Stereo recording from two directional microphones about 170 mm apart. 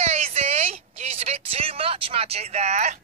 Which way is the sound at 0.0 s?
40° right (ahead or behind).